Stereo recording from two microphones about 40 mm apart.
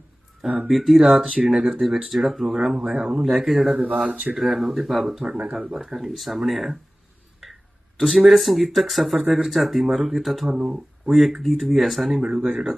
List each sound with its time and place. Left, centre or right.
0.7 s speech: centre
3.9 s speech: centre
4.4 s speech: centre
5.3 s speech: centre
7.9 s speech: centre
10.5 s speech: centre
11.1 s speech: centre
12.5 s speech: centre